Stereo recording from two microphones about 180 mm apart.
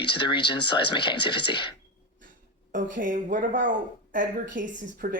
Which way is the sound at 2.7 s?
45° right (ahead or behind).